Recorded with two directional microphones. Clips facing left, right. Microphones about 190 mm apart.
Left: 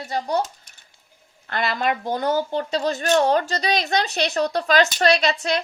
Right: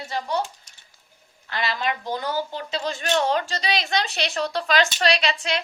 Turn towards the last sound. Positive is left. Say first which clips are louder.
# left 4 dB
turn(degrees=40)  # may be behind; listen again after turning